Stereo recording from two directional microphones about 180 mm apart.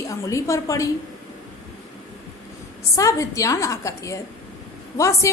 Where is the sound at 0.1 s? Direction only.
15° left (ahead or behind).